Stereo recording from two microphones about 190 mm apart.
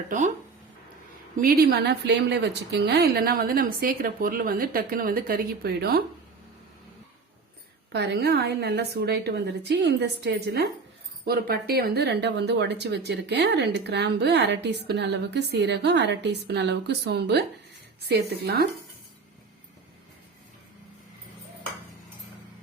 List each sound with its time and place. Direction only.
1.4 s a woman's voice: 50° right (ahead or behind)
7.9 s speech: 60° right (ahead or behind)